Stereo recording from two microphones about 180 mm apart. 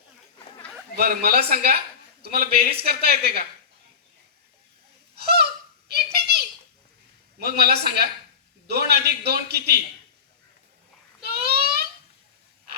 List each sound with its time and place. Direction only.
0.9 s a man's voice: 60° right (ahead or behind)
5.1 s a sound: 60° right (ahead or behind)
7.3 s a man's voice: 60° right (ahead or behind)
11.2 s babbling: 60° right (ahead or behind)